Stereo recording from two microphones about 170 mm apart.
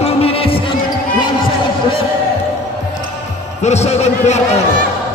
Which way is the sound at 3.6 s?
40° left (ahead or behind).